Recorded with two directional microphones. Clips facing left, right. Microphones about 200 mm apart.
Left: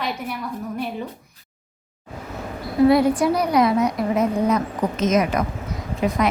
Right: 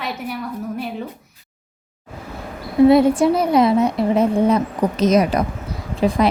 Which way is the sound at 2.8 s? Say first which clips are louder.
Right 4 dB; 25° right (ahead or behind).